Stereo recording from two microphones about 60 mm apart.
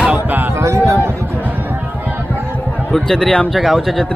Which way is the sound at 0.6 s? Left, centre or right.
Right.